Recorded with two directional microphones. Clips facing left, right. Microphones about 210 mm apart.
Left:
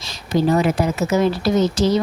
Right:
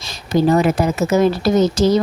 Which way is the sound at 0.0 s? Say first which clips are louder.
Right 3 dB; 45° right (ahead or behind).